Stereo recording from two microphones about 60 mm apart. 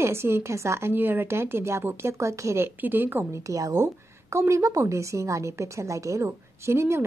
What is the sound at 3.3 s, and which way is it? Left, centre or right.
Speech, right.